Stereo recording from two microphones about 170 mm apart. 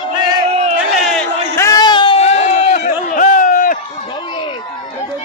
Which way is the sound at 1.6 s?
20° left (ahead or behind).